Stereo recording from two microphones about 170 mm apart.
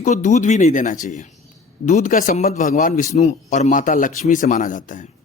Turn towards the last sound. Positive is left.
turn(degrees=50)  # may be behind; listen again after turning